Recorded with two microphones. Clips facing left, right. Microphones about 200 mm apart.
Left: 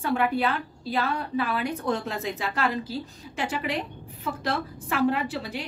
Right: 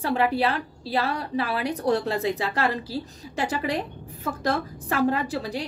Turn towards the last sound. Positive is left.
turn(degrees=-40)  # may be behind; listen again after turning